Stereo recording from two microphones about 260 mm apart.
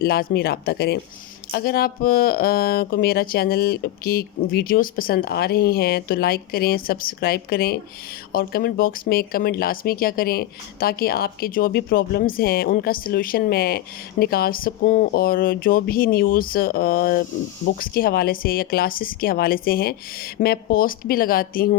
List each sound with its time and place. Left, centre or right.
0.0 s speech: left